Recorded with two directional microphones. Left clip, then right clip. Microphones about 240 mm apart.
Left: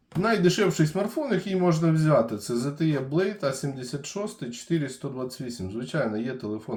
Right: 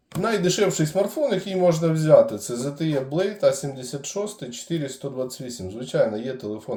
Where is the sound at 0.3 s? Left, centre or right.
Centre.